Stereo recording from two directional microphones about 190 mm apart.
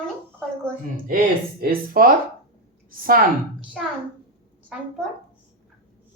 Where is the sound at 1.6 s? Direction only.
50° right (ahead or behind).